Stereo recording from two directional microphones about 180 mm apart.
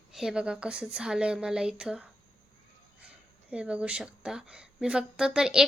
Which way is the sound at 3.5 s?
5° right (ahead or behind).